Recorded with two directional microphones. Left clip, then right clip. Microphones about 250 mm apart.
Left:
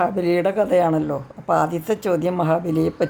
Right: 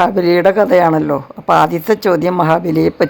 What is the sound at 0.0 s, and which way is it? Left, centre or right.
Speech, right.